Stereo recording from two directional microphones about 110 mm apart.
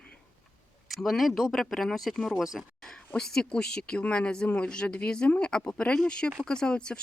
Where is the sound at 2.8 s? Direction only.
5° left (ahead or behind).